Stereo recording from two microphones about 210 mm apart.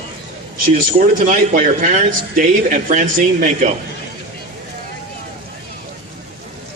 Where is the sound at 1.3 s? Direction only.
35° right (ahead or behind).